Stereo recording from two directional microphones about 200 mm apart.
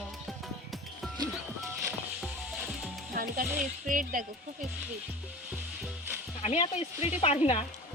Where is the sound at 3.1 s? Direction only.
45° right (ahead or behind).